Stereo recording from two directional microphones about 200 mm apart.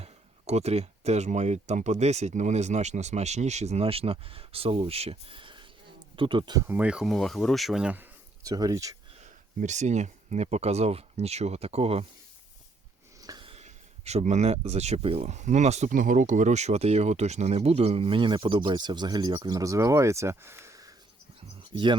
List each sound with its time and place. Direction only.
0.0 s speech: 30° right (ahead or behind); by 8.0 s 5° right (ahead or behind)
8.4 s speech: 20° right (ahead or behind)
9.2 s speech: 35° right (ahead or behind)
13.2 s speech: 25° right (ahead or behind)